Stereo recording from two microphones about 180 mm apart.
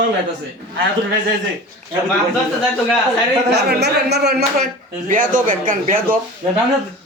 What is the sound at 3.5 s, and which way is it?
Speech, 65° right (ahead or behind).